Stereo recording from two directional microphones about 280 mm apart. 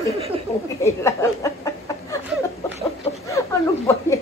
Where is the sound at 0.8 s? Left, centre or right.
Centre.